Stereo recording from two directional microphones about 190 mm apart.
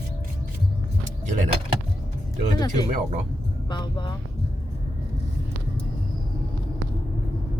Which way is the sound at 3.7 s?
25° left (ahead or behind).